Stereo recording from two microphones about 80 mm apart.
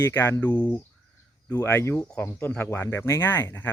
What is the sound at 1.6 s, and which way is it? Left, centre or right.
Speech, left.